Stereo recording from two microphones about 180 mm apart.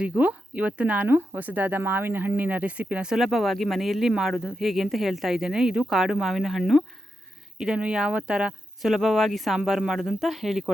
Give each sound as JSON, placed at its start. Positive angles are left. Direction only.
{"t": 0.0, "sound": "speech", "side_deg": -5}